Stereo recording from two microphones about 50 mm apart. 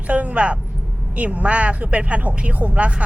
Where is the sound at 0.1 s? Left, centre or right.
Right.